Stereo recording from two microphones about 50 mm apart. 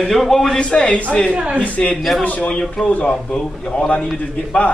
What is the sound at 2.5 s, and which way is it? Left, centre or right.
A man's voice, centre.